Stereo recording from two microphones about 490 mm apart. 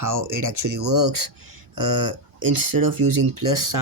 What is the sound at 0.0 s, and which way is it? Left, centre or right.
Speech, right.